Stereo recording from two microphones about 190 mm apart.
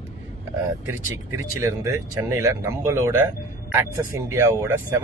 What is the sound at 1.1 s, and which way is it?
Speech, 15° right (ahead or behind).